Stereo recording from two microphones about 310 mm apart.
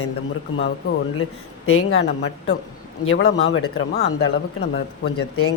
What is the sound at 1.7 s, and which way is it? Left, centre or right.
Speech, left.